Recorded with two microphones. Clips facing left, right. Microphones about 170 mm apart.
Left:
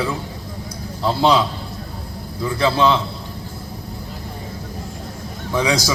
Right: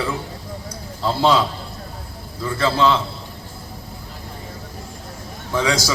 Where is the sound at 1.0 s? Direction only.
Centre (ahead or behind).